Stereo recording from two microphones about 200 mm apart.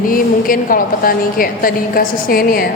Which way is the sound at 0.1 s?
45° left (ahead or behind).